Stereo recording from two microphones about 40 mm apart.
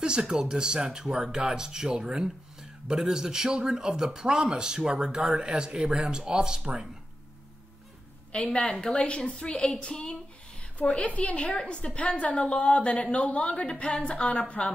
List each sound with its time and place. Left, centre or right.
0.0 s speech: centre
8.3 s a woman's voice: left